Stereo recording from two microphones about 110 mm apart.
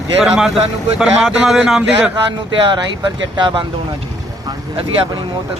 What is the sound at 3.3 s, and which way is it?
Speech, 45° right (ahead or behind).